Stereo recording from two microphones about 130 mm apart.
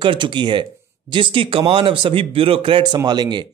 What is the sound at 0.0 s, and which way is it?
Speech, 40° right (ahead or behind).